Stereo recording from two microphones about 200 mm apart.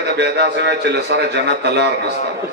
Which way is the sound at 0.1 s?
55° right (ahead or behind).